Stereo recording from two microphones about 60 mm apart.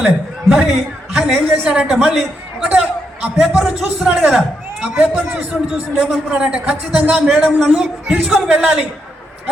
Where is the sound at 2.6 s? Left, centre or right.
Right.